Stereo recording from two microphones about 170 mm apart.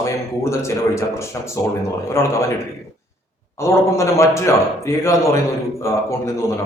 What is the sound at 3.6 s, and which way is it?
A man's voice, 15° left (ahead or behind).